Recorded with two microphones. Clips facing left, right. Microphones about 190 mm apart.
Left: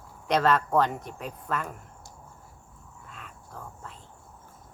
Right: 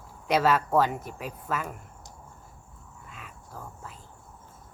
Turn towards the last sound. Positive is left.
turn(degrees=-5)  # may be behind; listen again after turning